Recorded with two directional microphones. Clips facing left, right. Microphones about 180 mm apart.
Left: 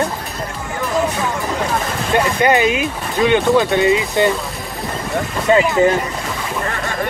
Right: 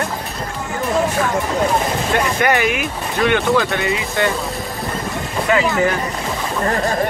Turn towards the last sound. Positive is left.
turn(degrees=25)  # may be behind; listen again after turning